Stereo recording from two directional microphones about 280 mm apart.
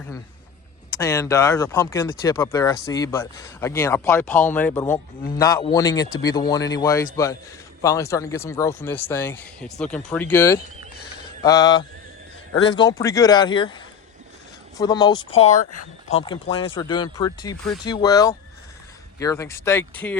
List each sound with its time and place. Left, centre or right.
0.9 s speech: centre